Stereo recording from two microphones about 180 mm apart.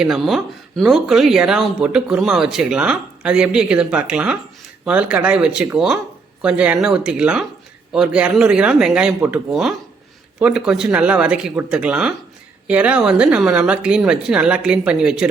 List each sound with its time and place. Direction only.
0.0 s speech: centre (ahead or behind)